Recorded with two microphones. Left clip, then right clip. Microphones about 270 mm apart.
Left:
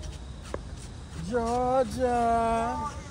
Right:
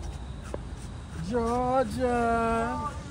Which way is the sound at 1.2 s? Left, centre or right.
Left.